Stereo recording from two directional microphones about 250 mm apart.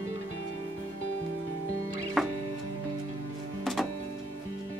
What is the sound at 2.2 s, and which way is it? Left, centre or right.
Music, centre.